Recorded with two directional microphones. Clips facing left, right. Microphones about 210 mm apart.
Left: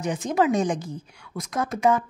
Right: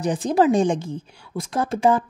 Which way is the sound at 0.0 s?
35° right (ahead or behind).